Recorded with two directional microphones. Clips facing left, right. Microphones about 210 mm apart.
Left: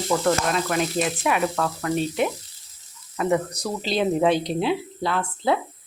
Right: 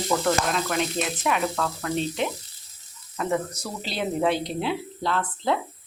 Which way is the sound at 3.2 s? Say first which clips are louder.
Left 4 dB; 10° left (ahead or behind).